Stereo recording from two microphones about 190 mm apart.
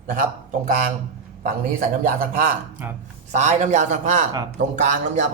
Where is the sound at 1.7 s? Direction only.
45° right (ahead or behind).